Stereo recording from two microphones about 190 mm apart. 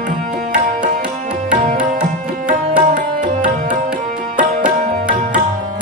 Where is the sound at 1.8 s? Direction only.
5° right (ahead or behind).